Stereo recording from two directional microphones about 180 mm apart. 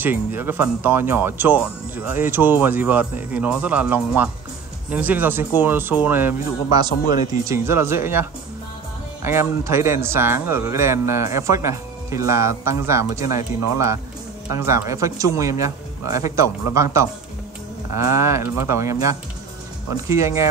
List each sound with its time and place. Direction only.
0.0 s speech: 10° right (ahead or behind)
14.5 s speech: 15° right (ahead or behind)